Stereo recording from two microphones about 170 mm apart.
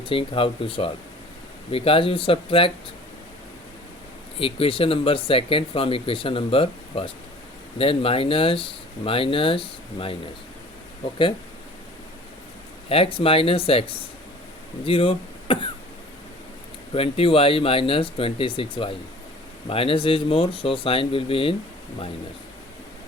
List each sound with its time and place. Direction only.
0.0 s speech: 30° left (ahead or behind)
4.4 s speech: 35° left (ahead or behind)
12.9 s speech: 30° left (ahead or behind)
16.9 s speech: 35° left (ahead or behind)